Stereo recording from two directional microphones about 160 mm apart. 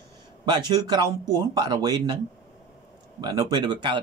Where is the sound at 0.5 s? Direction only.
25° right (ahead or behind).